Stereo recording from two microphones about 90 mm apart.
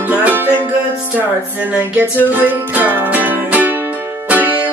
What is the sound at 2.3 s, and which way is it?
Music, 20° right (ahead or behind).